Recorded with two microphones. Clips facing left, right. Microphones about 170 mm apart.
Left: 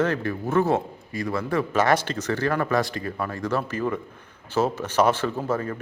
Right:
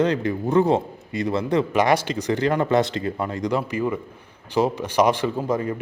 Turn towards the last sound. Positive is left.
turn(degrees=-15)  # may be behind; listen again after turning